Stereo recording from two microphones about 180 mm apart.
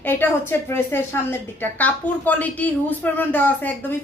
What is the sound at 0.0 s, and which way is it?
A woman's voice, 10° left (ahead or behind).